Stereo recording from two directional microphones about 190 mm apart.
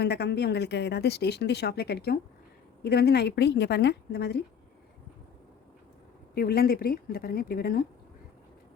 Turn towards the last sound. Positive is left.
turn(degrees=50)  # may be behind; listen again after turning